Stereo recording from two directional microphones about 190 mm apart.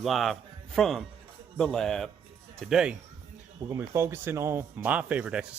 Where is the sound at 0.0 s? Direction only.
Centre (ahead or behind).